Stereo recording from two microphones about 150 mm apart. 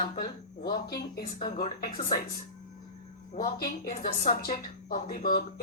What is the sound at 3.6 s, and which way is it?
A woman's voice, 75° left (ahead or behind).